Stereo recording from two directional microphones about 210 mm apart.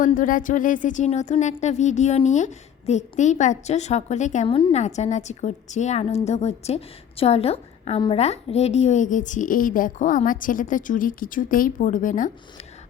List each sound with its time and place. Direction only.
0.0 s a woman's voice: 40° left (ahead or behind)